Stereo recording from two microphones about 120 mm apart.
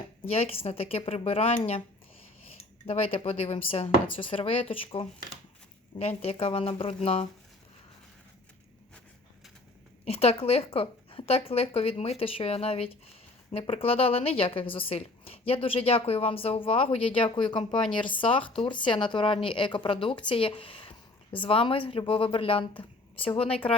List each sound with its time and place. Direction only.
0.3 s speech: 55° left (ahead or behind)
2.8 s a woman's voice: 55° left (ahead or behind)
6.0 s speech: 60° left (ahead or behind)
10.1 s a woman's voice: 55° left (ahead or behind)
17.7 s speech: 5° left (ahead or behind)
18.0 s a woman's voice: 45° left (ahead or behind)